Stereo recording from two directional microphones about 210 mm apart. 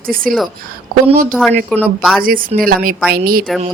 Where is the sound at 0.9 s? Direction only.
40° right (ahead or behind).